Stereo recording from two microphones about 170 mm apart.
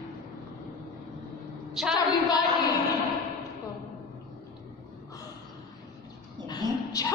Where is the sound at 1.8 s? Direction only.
Centre (ahead or behind).